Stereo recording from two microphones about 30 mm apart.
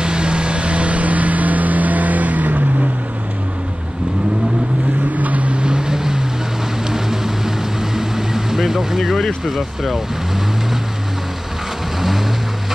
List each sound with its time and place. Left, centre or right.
0.0 s vehicle: right
5.1 s boat: right
5.5 s boat: right
6.9 s vehicle: centre
9.5 s speech: centre